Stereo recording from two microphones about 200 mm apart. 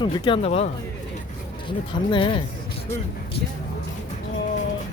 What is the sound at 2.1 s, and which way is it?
Speech, 25° left (ahead or behind).